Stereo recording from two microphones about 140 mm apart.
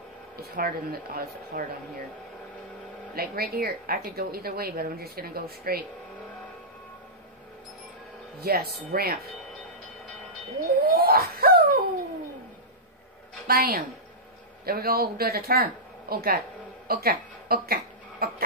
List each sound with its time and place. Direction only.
0.4 s a woman's voice: 90° right
3.2 s a woman's voice: 90° right
8.4 s a woman's voice: 90° right
10.9 s wail: 90° right
13.5 s a woman's voice: 90° right